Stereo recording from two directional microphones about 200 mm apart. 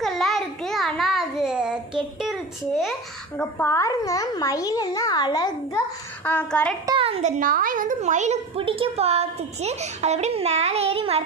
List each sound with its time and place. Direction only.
0.0 s a sound: centre (ahead or behind)
3.3 s a child's voice: 10° left (ahead or behind)
6.2 s a child's voice: 5° left (ahead or behind)
6.9 s a woman's voice: 30° right (ahead or behind)